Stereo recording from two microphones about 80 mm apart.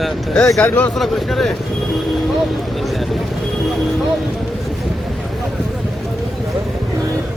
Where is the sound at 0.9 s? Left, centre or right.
Centre.